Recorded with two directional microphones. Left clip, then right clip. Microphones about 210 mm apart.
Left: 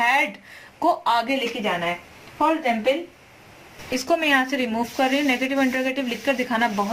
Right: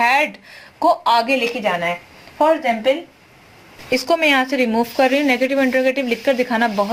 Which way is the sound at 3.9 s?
25° right (ahead or behind).